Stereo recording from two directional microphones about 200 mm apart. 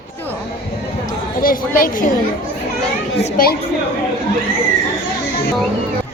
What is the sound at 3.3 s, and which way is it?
Speech, 45° left (ahead or behind).